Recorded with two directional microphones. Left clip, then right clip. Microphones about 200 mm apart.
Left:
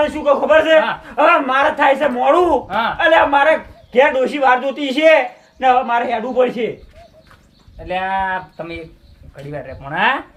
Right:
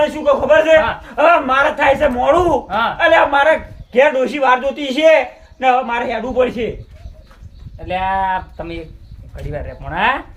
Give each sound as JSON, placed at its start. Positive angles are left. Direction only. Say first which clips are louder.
{"t": 0.0, "sound": "a man's voice", "louder": "right 1 dB", "side_deg": 0}
{"t": 2.6, "sound": "speech", "louder": "right 1 dB", "side_deg": -15}
{"t": 3.0, "sound": "a man's voice", "louder": "even", "side_deg": 10}
{"t": 7.9, "sound": "speech", "louder": "right 2 dB", "side_deg": -25}